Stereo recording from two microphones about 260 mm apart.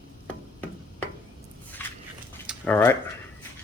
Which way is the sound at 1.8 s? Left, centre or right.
Centre.